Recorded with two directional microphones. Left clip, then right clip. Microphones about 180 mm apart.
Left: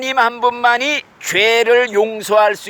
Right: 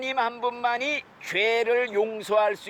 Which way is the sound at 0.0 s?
35° left (ahead or behind).